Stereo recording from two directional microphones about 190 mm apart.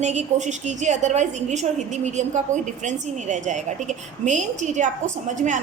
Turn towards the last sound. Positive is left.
turn(degrees=-40)  # may be behind; listen again after turning